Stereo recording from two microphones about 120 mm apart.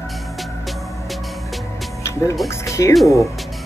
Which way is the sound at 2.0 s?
25° left (ahead or behind).